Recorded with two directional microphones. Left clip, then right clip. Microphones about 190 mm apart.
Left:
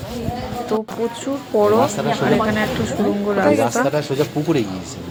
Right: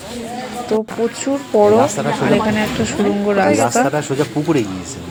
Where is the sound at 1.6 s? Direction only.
10° right (ahead or behind).